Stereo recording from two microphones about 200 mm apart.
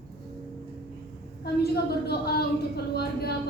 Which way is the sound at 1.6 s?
50° left (ahead or behind).